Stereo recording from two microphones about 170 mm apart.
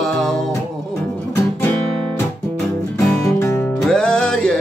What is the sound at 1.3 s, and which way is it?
Guitar, 10° left (ahead or behind).